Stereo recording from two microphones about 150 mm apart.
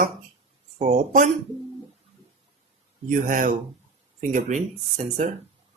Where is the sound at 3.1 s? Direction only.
60° right (ahead or behind).